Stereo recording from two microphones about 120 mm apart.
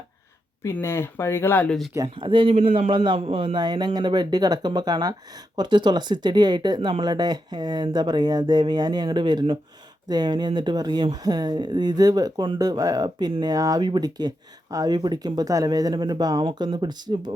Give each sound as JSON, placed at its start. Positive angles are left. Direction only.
{"t": 0.6, "sound": "speech", "side_deg": 20}
{"t": 2.1, "sound": "speech", "side_deg": -45}
{"t": 2.9, "sound": "speech", "side_deg": -45}